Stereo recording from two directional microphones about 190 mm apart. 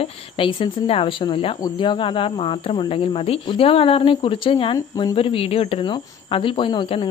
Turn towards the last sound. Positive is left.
turn(degrees=25)  # may be behind; listen again after turning